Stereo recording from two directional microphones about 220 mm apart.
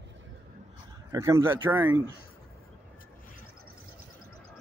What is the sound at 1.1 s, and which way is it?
Speech, 15° right (ahead or behind).